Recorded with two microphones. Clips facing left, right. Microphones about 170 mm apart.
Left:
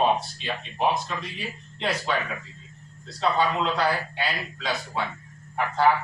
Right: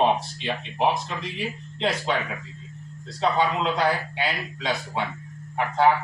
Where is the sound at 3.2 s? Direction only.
20° right (ahead or behind).